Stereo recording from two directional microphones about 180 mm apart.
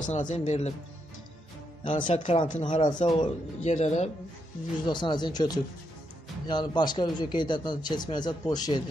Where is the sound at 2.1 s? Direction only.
30° left (ahead or behind).